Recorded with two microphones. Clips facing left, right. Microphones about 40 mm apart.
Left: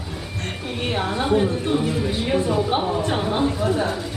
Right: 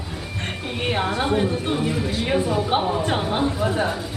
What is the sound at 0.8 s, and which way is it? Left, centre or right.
A woman's voice, centre.